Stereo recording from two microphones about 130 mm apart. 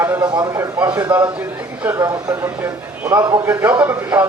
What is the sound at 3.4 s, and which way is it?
Speech, 20° right (ahead or behind).